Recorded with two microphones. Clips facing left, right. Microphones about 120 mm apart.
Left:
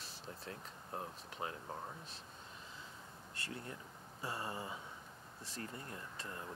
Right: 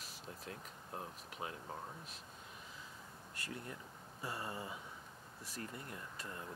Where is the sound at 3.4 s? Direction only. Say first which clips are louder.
Even; 30° left (ahead or behind).